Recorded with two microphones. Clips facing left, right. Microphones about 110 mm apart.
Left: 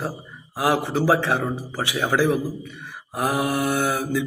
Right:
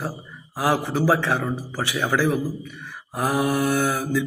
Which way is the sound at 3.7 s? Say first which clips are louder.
Even; 20° left (ahead or behind).